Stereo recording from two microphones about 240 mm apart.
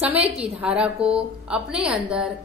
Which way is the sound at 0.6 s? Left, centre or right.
Centre.